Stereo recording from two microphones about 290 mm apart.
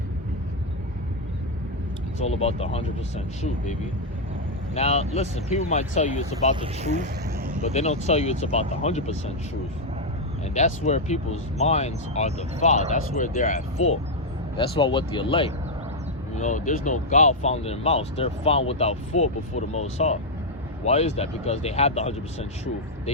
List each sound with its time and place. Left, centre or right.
2.1 s speech: left
4.7 s speech: left
6.6 s speech: right
7.6 s speech: left
10.5 s speech: left